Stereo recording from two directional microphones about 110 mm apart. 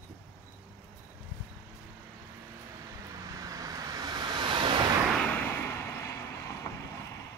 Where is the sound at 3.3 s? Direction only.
30° right (ahead or behind); by 4.9 s 50° right (ahead or behind).